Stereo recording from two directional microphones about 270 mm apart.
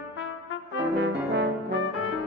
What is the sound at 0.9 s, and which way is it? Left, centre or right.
Brass instrument, right.